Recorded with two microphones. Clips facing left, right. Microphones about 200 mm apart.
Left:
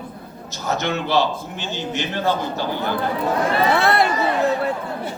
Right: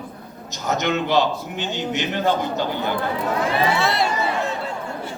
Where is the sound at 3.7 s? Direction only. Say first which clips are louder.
Left 4 dB; 60° left (ahead or behind).